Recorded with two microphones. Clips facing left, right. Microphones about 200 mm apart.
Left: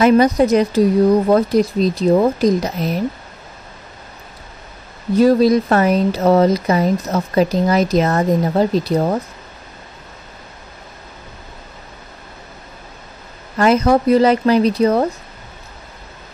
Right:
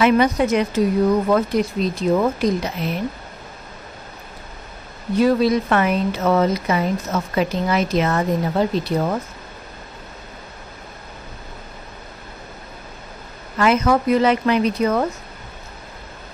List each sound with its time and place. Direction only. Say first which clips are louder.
0.0 s speech: left 4 dB; 35° left (ahead or behind)
5.1 s speech: left 4 dB; 40° left (ahead or behind)
13.6 s speech: left 4 dB; 35° left (ahead or behind)